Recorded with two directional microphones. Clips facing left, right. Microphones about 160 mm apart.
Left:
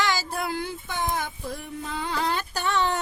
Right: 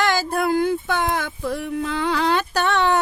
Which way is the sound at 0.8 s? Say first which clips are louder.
Right 6 dB; 75° right (ahead or behind).